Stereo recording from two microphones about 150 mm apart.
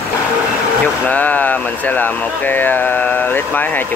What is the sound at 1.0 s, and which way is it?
Speech, 10° left (ahead or behind).